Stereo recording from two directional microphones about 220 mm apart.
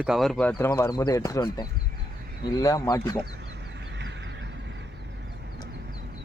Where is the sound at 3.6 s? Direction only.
50° right (ahead or behind).